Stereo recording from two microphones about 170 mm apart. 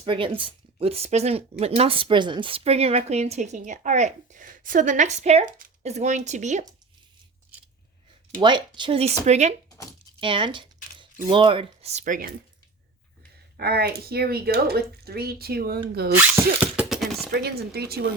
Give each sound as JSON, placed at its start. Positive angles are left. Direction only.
{"t": 0.0, "sound": "speech", "side_deg": -30}
{"t": 8.4, "sound": "speech", "side_deg": -25}
{"t": 9.6, "sound": "a sound", "side_deg": 20}
{"t": 10.2, "sound": "speech", "side_deg": -30}
{"t": 13.6, "sound": "speech", "side_deg": -65}
{"t": 16.1, "sound": "zipper", "side_deg": -10}
{"t": 17.3, "sound": "speech", "side_deg": -70}